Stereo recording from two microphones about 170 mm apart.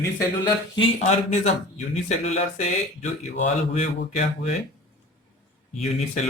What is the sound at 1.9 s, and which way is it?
Speech, 45° left (ahead or behind).